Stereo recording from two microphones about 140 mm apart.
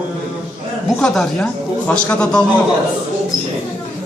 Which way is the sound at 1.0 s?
5° left (ahead or behind).